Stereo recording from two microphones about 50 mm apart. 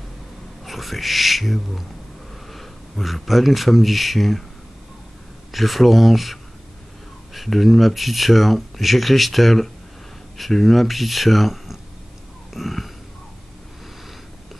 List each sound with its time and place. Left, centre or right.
0.7 s speech: centre
5.5 s speech: centre
12.5 s wheeze: centre